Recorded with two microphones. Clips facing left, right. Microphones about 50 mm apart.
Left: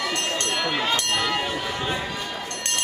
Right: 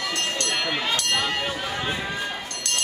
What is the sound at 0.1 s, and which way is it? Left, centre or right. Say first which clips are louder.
Run: left 1 dB; left.